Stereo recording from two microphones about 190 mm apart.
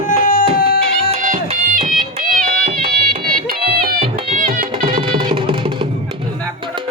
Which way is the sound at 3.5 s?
50° right (ahead or behind).